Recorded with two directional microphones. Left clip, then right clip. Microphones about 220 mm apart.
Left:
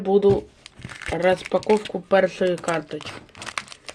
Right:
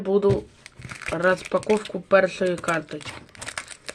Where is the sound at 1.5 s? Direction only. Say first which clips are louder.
Left 1 dB; 25° left (ahead or behind).